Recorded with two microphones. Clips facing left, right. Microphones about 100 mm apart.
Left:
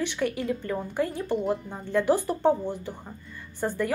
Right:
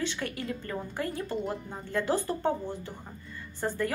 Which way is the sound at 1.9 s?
15° left (ahead or behind).